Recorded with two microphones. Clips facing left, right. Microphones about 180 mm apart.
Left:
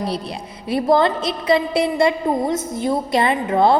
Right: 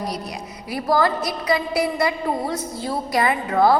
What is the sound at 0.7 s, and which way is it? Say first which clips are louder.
A woman's voice: left 4 dB; 25° left (ahead or behind).